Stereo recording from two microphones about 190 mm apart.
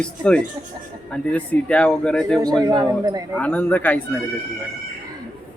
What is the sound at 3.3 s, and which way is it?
Speech, 10° left (ahead or behind).